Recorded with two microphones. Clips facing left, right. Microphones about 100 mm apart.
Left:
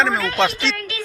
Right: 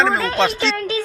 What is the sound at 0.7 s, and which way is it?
Music, 30° right (ahead or behind).